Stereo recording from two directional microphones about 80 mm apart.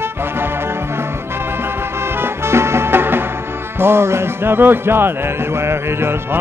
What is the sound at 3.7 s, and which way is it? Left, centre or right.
Speech, right.